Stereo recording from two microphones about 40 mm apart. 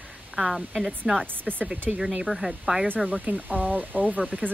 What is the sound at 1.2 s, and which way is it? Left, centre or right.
Speech, right.